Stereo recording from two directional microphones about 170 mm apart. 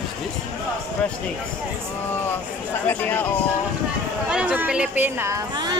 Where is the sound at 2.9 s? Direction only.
10° left (ahead or behind).